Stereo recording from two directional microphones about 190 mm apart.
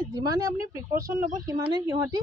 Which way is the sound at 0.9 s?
50° right (ahead or behind).